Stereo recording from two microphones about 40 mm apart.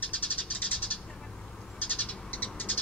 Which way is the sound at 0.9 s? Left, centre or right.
Left.